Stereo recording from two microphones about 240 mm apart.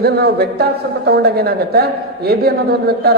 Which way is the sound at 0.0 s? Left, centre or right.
Right.